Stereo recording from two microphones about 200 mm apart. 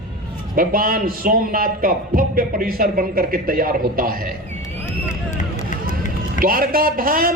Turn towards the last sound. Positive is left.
turn(degrees=-45)  # may be behind; listen again after turning